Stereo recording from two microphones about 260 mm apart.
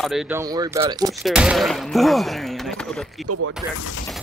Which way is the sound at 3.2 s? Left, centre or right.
Right.